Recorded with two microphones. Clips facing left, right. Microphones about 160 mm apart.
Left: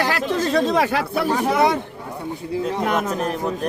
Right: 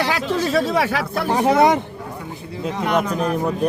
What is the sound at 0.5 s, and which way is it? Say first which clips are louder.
Speech: left 1 dB; 5° right (ahead or behind).